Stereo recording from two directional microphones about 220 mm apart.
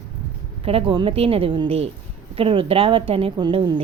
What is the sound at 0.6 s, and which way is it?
A woman's voice, 25° right (ahead or behind).